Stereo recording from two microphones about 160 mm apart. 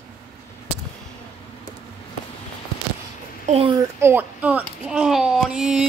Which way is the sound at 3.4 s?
40° right (ahead or behind).